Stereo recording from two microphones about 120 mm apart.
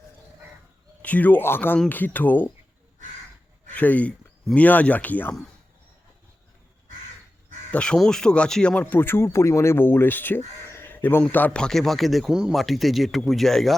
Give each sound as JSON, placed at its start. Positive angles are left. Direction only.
{"t": 1.0, "sound": "speech", "side_deg": 15}
{"t": 3.7, "sound": "speech", "side_deg": 15}
{"t": 7.7, "sound": "speech", "side_deg": 10}